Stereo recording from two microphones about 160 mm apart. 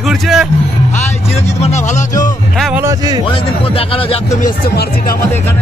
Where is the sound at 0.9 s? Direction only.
45° left (ahead or behind).